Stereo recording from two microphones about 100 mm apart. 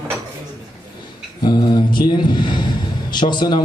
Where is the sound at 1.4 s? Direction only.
45° left (ahead or behind).